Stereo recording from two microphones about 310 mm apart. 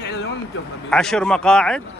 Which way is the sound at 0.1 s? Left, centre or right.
Left.